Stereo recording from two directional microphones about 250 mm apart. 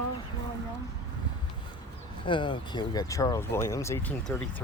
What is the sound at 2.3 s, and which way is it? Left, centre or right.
Speech, centre.